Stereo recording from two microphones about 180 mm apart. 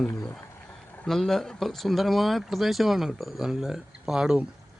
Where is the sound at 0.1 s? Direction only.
20° left (ahead or behind).